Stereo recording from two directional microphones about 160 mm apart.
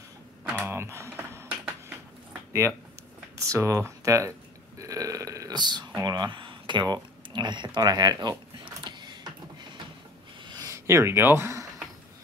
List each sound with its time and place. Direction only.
0.4 s computer keyboard: 10° right (ahead or behind)
3.4 s speech: 20° right (ahead or behind)
4.7 s burping: 20° right (ahead or behind)
10.4 s a sound: 25° right (ahead or behind)